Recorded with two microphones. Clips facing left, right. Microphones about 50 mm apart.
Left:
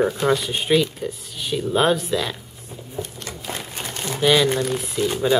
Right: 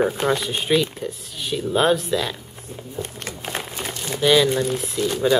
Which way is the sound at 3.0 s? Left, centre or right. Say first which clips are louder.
Even; right.